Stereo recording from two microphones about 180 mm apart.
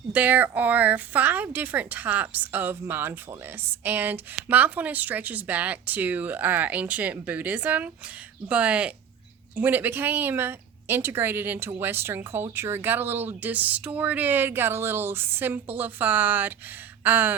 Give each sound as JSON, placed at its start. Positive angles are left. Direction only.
{"t": 0.1, "sound": "speech", "side_deg": -10}
{"t": 17.0, "sound": "gasp", "side_deg": -10}